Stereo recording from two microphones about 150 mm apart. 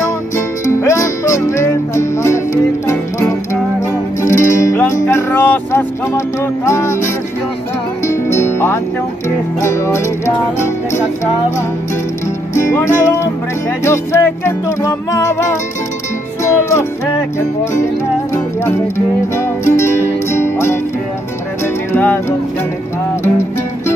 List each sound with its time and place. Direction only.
0.7 s music: 20° left (ahead or behind)
8.1 s music: 20° left (ahead or behind)
12.5 s music: 20° left (ahead or behind)
18.3 s music: 20° left (ahead or behind)
21.9 s music: 10° left (ahead or behind)